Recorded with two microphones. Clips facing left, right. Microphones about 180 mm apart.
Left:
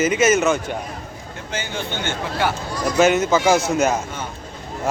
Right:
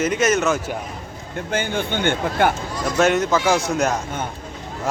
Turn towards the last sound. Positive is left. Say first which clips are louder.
# left 2 dB
turn(degrees=0)  # may be behind; listen again after turning